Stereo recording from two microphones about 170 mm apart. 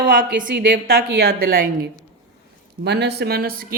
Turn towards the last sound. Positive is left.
turn(degrees=-60)  # may be behind; listen again after turning